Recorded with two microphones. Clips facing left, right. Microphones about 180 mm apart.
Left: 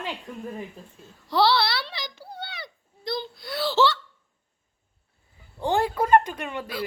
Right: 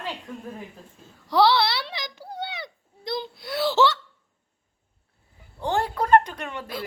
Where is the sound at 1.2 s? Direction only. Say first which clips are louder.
Right 2 dB; 15° right (ahead or behind).